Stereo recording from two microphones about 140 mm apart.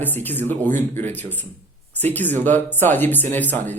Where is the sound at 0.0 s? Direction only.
15° left (ahead or behind).